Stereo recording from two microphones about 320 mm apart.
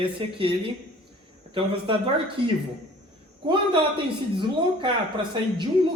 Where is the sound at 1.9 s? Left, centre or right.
Centre.